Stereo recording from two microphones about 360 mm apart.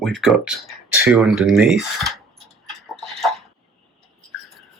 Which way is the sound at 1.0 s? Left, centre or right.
Centre.